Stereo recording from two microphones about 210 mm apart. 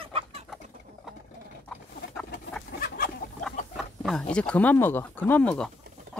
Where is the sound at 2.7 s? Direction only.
45° left (ahead or behind).